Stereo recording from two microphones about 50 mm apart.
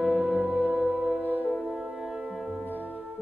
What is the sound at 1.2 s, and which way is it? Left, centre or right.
Music, right.